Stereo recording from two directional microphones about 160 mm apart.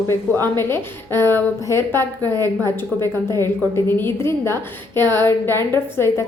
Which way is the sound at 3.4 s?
15° left (ahead or behind).